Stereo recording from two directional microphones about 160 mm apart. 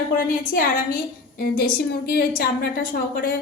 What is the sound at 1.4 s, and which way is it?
Speech, 70° left (ahead or behind).